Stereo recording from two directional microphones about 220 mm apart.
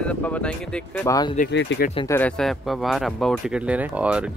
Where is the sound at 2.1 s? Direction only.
5° left (ahead or behind).